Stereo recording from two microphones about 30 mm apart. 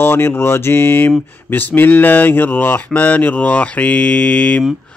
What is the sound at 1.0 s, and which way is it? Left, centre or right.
Speech, left.